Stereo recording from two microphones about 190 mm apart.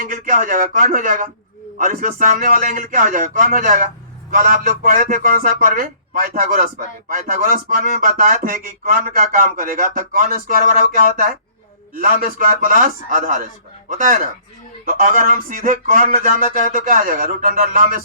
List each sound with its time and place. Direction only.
0.0 s a man's voice: 45° right (ahead or behind)